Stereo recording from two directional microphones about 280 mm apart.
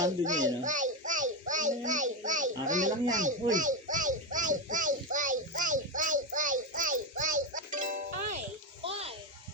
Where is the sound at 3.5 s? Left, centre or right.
Right.